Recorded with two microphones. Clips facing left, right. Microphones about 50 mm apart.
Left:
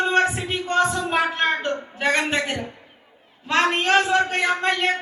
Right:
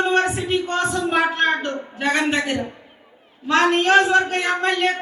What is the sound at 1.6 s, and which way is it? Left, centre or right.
Music, left.